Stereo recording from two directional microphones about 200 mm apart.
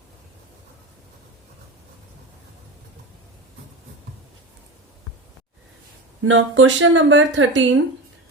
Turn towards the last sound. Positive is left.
turn(degrees=-65)  # may be behind; listen again after turning